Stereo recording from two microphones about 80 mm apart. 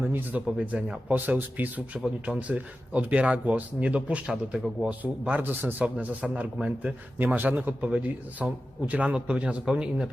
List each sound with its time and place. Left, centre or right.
0.1 s a man's voice: right